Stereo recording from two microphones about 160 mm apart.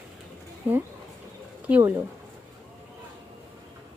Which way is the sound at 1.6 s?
10° right (ahead or behind).